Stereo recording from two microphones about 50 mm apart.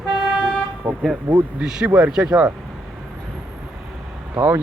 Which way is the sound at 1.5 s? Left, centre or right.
Centre.